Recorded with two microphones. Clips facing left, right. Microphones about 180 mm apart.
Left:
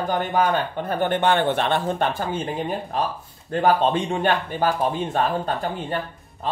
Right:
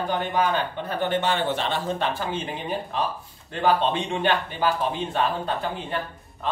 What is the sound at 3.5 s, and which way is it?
Speech, 45° left (ahead or behind).